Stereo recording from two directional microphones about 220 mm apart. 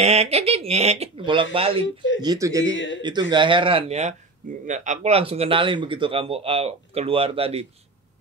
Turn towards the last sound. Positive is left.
turn(degrees=-25)  # may be behind; listen again after turning